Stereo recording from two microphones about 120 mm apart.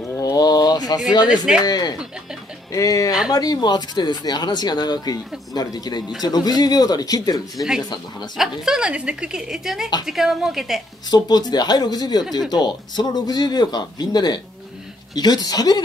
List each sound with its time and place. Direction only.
0.2 s a sound: 30° left (ahead or behind)
1.3 s speech: 5° right (ahead or behind)
1.7 s speech: 35° left (ahead or behind)
8.4 s a woman's voice: 5° right (ahead or behind)
11.1 s speech: 35° left (ahead or behind)